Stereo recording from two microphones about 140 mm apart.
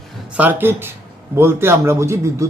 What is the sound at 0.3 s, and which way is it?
A man's voice, 15° right (ahead or behind).